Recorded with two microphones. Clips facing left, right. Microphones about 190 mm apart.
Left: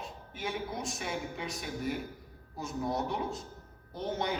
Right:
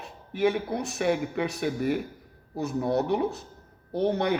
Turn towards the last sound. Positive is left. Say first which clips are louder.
# right 9 dB
turn(degrees=-65)  # may be behind; listen again after turning